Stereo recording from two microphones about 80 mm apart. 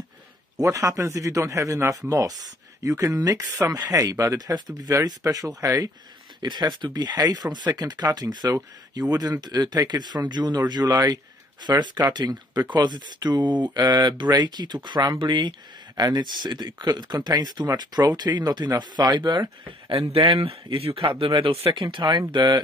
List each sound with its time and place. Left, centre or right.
0.6 s speech: right
6.4 s speech: right
16.0 s speech: right
20.9 s speech: right
22.3 s speech: right